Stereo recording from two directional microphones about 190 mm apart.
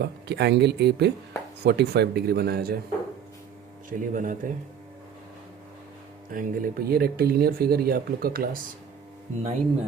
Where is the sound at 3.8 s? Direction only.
45° right (ahead or behind).